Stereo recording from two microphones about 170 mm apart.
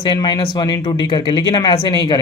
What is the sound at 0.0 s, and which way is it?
Speech, 25° left (ahead or behind).